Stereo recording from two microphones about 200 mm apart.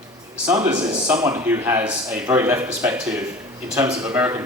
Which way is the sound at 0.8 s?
20° right (ahead or behind).